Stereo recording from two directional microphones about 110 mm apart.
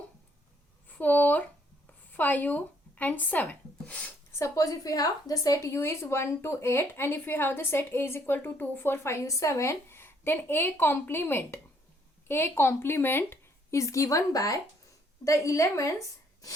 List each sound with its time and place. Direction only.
0.9 s speech: 15° left (ahead or behind)
4.3 s a woman's voice: 25° left (ahead or behind)